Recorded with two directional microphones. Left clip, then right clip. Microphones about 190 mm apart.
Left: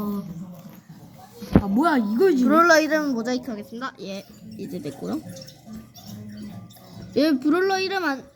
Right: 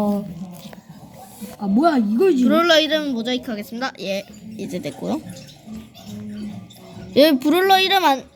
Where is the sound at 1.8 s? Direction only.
65° right (ahead or behind).